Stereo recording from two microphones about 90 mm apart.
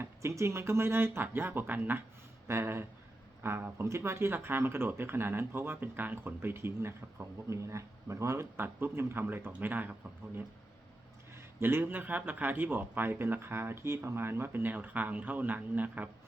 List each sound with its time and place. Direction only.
0.0 s speech: 30° right (ahead or behind)
11.3 s speech: 25° right (ahead or behind)